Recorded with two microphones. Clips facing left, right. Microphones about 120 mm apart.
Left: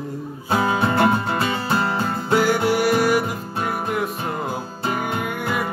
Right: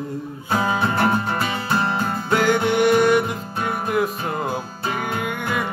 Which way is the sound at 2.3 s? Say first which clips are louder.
Even; 10° left (ahead or behind).